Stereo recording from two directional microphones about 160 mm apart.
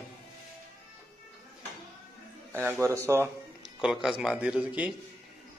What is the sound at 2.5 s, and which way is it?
Speech, 15° right (ahead or behind).